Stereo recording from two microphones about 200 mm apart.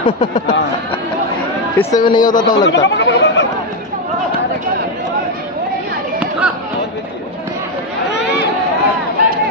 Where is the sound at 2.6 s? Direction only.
60° left (ahead or behind).